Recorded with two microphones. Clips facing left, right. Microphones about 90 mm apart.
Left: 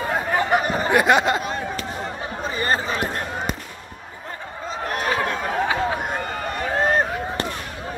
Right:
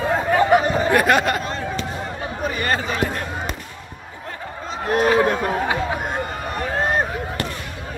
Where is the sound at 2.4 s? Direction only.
30° left (ahead or behind).